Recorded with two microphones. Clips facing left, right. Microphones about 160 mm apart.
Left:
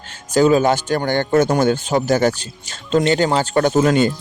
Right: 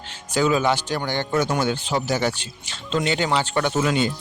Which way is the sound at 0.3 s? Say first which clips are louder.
Left 6 dB; 40° left (ahead or behind).